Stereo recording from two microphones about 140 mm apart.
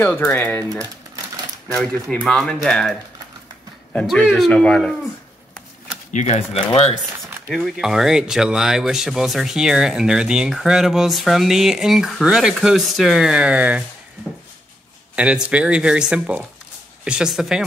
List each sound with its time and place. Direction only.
0.0 s speech: 15° left (ahead or behind)
2.0 s speech: 5° left (ahead or behind)
6.1 s speech: 55° left (ahead or behind)
7.5 s speech: centre (ahead or behind)
15.1 s speech: 10° right (ahead or behind)